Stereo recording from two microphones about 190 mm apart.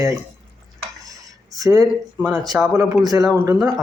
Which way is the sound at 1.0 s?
20° right (ahead or behind).